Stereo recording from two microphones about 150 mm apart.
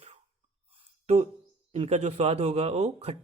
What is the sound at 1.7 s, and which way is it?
A man's voice, 45° right (ahead or behind).